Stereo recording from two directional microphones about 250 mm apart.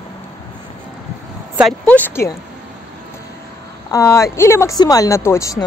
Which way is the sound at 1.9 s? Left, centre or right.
Centre.